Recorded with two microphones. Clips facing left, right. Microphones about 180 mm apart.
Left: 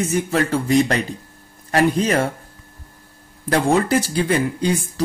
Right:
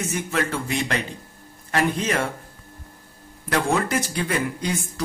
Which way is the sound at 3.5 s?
30° left (ahead or behind).